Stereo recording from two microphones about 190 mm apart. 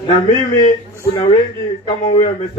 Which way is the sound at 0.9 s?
15° left (ahead or behind).